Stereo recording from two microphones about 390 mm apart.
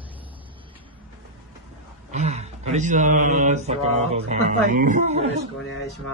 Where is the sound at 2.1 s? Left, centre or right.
Centre.